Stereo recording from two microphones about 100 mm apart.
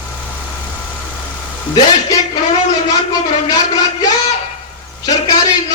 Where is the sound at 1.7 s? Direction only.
45° left (ahead or behind).